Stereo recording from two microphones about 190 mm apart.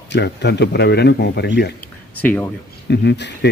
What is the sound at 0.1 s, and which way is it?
Speech, 65° left (ahead or behind).